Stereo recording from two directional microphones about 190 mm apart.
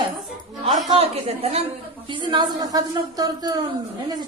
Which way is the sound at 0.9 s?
30° right (ahead or behind).